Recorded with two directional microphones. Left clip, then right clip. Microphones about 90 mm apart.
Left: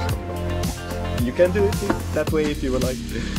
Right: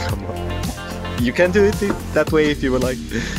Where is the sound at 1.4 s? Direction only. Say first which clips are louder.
Right 3 dB; 90° right.